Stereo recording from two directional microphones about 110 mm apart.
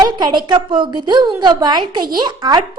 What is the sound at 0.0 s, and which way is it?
A woman's voice, 45° right (ahead or behind).